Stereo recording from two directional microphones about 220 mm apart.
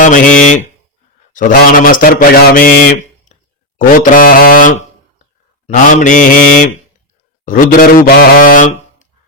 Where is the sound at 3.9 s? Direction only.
40° left (ahead or behind).